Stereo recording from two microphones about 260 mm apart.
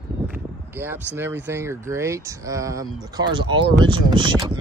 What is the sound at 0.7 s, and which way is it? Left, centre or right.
Speech, centre.